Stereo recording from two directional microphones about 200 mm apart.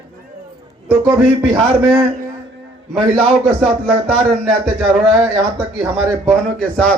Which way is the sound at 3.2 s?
Centre (ahead or behind).